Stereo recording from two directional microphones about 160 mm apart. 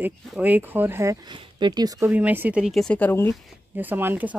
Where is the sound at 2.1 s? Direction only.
10° right (ahead or behind); by 3.4 s 15° left (ahead or behind).